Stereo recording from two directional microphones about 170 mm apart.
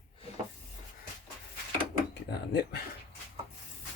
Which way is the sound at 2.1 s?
80° left.